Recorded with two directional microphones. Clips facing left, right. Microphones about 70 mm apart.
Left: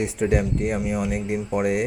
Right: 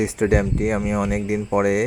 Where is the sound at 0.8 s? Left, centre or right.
Right.